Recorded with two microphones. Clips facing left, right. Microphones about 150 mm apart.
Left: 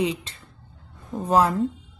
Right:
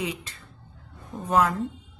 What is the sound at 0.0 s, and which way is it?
A woman's voice, 25° left (ahead or behind).